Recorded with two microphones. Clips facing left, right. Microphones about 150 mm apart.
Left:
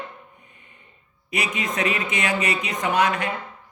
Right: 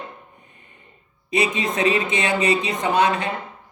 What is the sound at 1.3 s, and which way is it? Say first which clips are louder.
Speech: right 5 dB; 30° right (ahead or behind).